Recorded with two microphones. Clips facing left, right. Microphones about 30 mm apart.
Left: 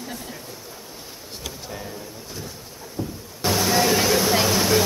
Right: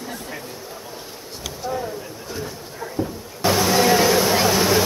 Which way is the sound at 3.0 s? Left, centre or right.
Right.